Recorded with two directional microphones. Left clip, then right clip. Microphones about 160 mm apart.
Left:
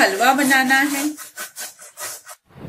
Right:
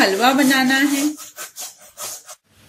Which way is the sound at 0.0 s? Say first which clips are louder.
Even; 45° right (ahead or behind).